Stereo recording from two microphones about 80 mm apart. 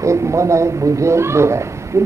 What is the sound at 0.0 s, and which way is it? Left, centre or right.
Speech, right.